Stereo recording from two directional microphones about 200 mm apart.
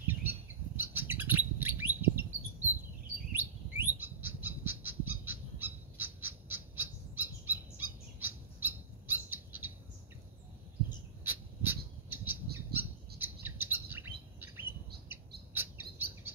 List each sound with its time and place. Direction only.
0.0 s bird: 10° right (ahead or behind)
11.2 s bird: 10° right (ahead or behind)